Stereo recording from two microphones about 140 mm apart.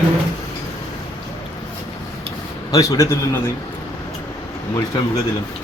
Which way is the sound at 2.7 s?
25° left (ahead or behind).